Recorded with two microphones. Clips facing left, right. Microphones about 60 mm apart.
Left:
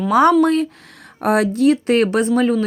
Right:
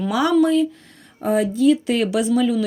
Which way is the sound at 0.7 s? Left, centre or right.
Left.